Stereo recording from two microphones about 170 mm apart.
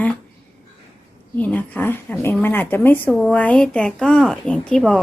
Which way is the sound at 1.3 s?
10° left (ahead or behind).